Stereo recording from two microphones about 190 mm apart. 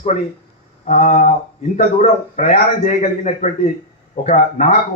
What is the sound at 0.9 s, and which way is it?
A man's voice, 35° left (ahead or behind).